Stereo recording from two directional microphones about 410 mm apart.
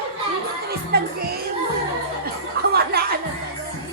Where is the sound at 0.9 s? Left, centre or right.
Right.